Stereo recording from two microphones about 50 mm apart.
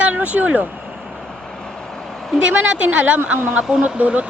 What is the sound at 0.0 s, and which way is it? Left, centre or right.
Vehicle, right.